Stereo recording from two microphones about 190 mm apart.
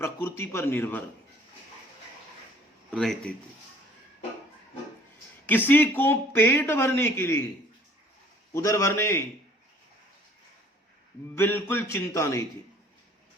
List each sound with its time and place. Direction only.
0.0 s a man's voice: 15° left (ahead or behind)
2.9 s speech: 5° left (ahead or behind)
5.5 s a man's voice: 10° left (ahead or behind)
8.5 s a man's voice: 15° left (ahead or behind)
11.3 s a man's voice: 10° left (ahead or behind)